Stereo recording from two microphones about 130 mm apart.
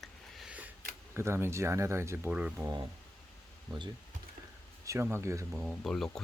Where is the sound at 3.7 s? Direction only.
35° right (ahead or behind).